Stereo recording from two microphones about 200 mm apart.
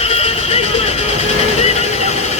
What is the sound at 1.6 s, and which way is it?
Vehicle, 30° left (ahead or behind).